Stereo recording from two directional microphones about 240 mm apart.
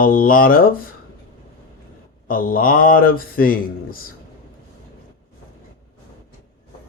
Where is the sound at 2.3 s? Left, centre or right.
Left.